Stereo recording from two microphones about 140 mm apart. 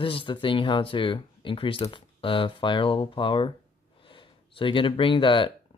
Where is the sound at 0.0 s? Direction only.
40° left (ahead or behind).